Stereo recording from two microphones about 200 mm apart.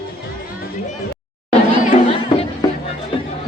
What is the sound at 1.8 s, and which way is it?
Chatter, 30° left (ahead or behind).